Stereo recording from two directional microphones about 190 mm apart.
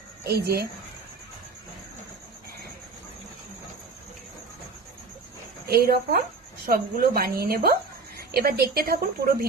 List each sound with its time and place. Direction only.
0.3 s speech: 55° right (ahead or behind)
5.6 s speech: 55° right (ahead or behind)